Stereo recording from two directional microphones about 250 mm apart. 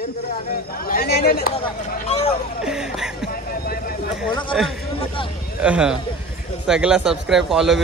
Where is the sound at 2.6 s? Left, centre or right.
Centre.